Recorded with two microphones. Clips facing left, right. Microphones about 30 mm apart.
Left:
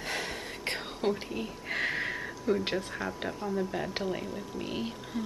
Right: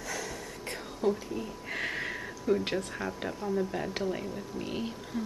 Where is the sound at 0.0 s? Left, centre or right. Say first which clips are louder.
Left 2 dB; left.